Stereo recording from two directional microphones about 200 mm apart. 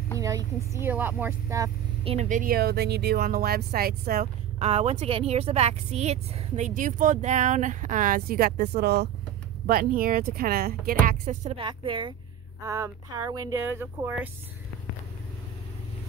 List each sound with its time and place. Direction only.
0.2 s speech: 15° right (ahead or behind)
2.0 s speech: 35° right (ahead or behind)
4.6 s a woman's voice: 30° right (ahead or behind); by 11.0 s 50° right (ahead or behind)
11.1 s speech: 35° right (ahead or behind); by 14.3 s 10° right (ahead or behind)